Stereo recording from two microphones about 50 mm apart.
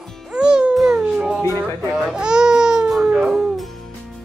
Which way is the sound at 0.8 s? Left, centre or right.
Centre.